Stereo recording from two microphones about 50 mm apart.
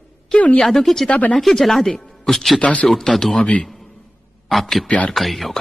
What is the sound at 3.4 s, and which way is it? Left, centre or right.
Speech, left.